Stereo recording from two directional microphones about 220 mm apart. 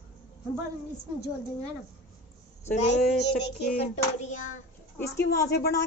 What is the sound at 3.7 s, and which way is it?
Hands, 30° left (ahead or behind).